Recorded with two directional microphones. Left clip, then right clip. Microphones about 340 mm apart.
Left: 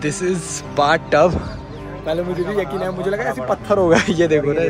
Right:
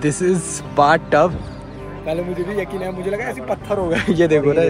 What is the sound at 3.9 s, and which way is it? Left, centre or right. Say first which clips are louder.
Speech: right 3 dB; centre.